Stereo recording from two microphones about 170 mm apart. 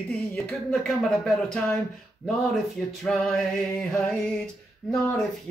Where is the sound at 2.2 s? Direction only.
Centre (ahead or behind).